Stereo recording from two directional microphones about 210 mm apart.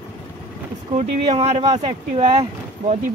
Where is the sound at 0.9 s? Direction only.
30° right (ahead or behind).